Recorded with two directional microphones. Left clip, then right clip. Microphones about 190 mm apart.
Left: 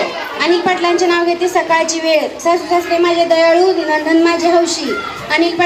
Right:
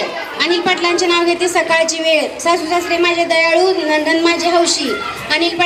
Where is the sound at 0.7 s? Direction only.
35° left (ahead or behind).